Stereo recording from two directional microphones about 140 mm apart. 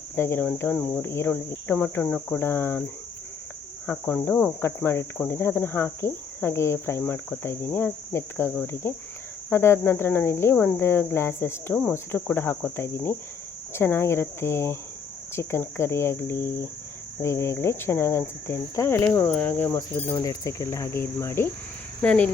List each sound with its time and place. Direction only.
0.2 s cricket: 15° left (ahead or behind)
3.8 s cricket: 15° left (ahead or behind)
13.7 s speech: 20° left (ahead or behind)
19.3 s cricket: 15° left (ahead or behind)
20.1 s speech: 25° left (ahead or behind)
22.0 s cricket: 10° left (ahead or behind)